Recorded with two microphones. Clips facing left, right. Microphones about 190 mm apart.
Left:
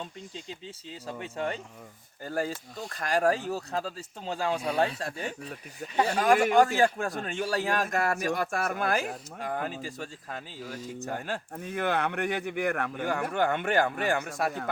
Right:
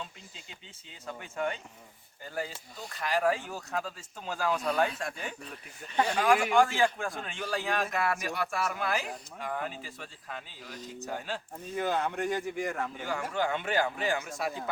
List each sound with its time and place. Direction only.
0.9 s speech: 30° left (ahead or behind)
2.2 s speech: 50° left (ahead or behind)
11.0 s speech: 55° left (ahead or behind)